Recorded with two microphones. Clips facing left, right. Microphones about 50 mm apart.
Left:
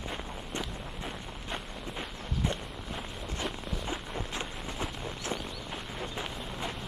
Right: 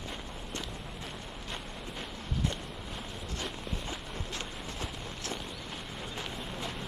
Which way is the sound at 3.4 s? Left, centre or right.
Left.